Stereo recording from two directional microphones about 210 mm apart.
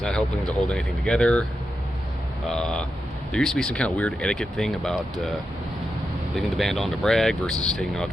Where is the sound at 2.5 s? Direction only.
5° left (ahead or behind).